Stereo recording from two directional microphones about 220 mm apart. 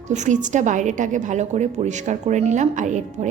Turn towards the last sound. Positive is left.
turn(degrees=-35)  # may be behind; listen again after turning